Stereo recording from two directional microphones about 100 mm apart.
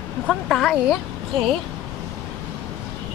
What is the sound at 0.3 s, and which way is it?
Speech, 5° left (ahead or behind).